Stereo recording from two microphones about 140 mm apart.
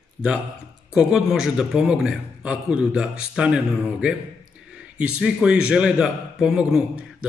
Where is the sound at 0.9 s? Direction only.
5° right (ahead or behind).